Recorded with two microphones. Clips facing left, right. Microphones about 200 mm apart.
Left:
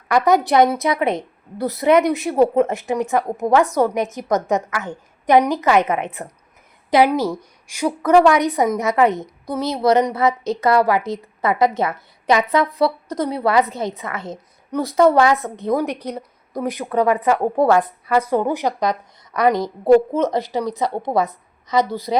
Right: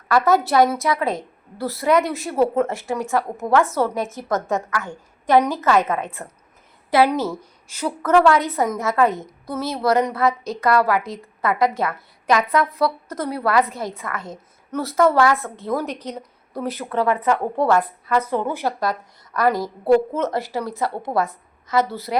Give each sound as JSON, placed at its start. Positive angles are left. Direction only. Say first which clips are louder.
{"t": 0.1, "sound": "a woman's voice", "louder": "left 2 dB", "side_deg": 15}